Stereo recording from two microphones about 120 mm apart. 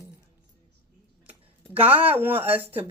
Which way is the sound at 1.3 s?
15° right (ahead or behind).